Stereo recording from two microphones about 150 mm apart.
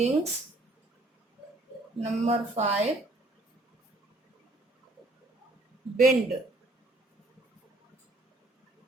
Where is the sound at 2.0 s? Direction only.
45° right (ahead or behind).